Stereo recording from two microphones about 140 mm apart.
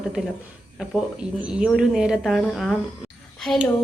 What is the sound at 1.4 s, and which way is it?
A woman's voice, 5° right (ahead or behind).